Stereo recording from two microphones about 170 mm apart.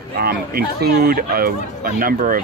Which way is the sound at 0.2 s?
65° right (ahead or behind).